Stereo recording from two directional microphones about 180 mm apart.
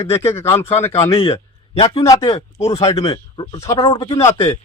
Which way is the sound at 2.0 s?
20° left (ahead or behind).